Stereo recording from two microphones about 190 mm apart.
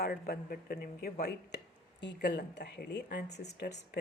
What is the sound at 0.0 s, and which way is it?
Speech, 55° left (ahead or behind).